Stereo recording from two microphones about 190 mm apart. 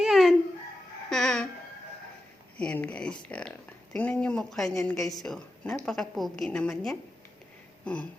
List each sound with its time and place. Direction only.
0.0 s chicken: centre (ahead or behind)
1.1 s music: centre (ahead or behind)
2.6 s speech: 5° left (ahead or behind)